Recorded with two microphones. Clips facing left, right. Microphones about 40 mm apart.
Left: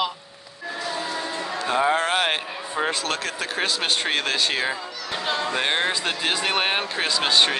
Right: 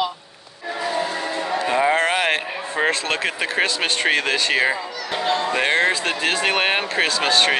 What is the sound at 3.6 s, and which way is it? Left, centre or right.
Speech, right.